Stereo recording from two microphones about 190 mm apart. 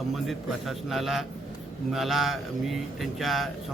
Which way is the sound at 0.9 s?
Centre (ahead or behind).